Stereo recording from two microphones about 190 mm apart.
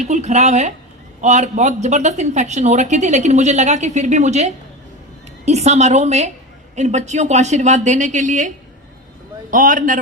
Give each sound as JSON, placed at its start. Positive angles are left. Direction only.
{"t": 0.1, "sound": "a man's voice", "side_deg": -35}